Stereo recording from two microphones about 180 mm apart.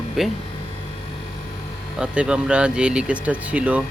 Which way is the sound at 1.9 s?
5° right (ahead or behind).